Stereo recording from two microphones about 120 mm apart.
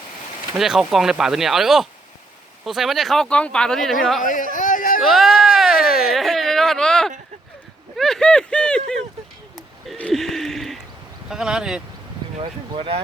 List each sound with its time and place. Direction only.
0.5 s speech: 5° right (ahead or behind)
4.2 s speech: 90° left
5.0 s a sound: centre (ahead or behind)
7.9 s speech: 5° left (ahead or behind)
9.6 s a sound: centre (ahead or behind)
11.3 s speech: 5° right (ahead or behind)
12.4 s speech: 45° right (ahead or behind)